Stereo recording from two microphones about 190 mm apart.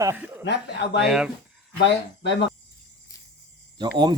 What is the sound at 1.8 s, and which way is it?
Speech, 65° left (ahead or behind).